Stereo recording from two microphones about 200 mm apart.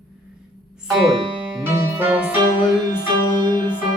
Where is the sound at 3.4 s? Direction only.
20° right (ahead or behind).